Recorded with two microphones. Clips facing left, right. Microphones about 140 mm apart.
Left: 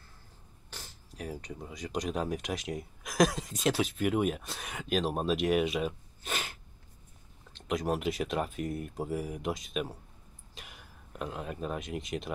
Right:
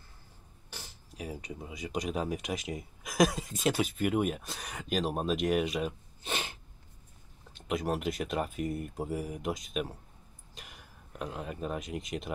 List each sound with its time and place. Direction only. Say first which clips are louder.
0.7 s speech: even; 5° right (ahead or behind)
6.2 s sneeze: right 1 dB; 30° right (ahead or behind)
7.5 s speech: left 1 dB; centre (ahead or behind)
10.5 s a sound: even; centre (ahead or behind)